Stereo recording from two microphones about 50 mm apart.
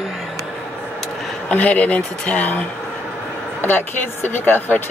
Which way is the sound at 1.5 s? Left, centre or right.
Left.